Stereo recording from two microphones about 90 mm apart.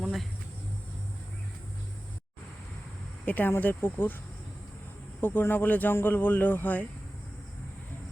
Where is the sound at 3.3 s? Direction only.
20° left (ahead or behind).